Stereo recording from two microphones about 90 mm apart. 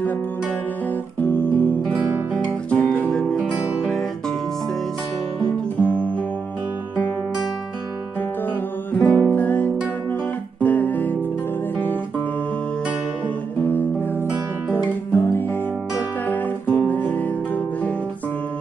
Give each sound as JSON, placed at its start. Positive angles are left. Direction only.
{"t": 1.2, "sound": "music", "side_deg": 20}
{"t": 2.3, "sound": "guitar", "side_deg": 15}
{"t": 3.1, "sound": "music", "side_deg": 10}
{"t": 5.8, "sound": "music", "side_deg": 15}
{"t": 8.9, "sound": "music", "side_deg": 20}
{"t": 16.3, "sound": "guitar", "side_deg": 20}